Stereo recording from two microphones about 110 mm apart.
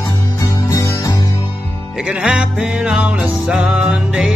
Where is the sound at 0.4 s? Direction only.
30° left (ahead or behind).